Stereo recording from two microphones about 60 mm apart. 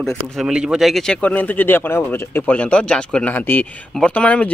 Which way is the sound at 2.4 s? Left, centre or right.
Left.